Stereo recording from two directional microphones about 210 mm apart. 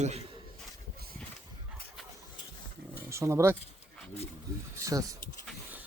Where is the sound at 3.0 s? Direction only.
15° right (ahead or behind).